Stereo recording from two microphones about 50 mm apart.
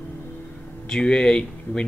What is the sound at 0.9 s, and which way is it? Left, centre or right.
Speech, centre.